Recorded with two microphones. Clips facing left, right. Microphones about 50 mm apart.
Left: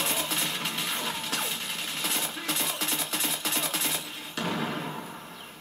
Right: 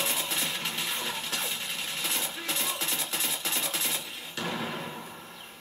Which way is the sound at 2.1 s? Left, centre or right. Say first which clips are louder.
Left 3 dB; left.